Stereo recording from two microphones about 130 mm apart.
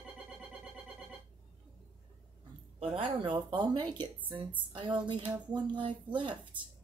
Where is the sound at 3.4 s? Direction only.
35° right (ahead or behind).